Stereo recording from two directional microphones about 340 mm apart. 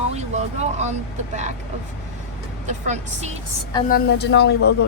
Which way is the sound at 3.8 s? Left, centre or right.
Left.